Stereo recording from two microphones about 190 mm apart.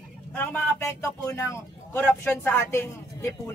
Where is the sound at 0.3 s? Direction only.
10° left (ahead or behind).